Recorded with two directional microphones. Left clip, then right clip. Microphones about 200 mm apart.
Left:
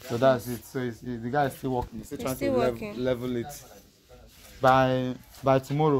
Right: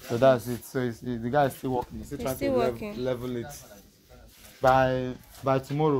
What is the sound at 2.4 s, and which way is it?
Speech, centre (ahead or behind).